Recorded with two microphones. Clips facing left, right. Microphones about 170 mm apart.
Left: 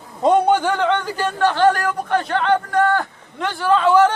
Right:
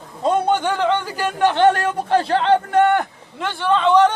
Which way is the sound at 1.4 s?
20° right (ahead or behind).